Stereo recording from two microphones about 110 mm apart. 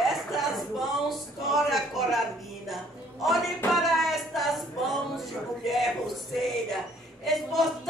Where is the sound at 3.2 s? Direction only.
Centre (ahead or behind).